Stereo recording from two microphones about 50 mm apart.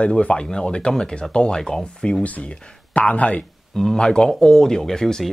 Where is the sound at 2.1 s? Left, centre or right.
Left.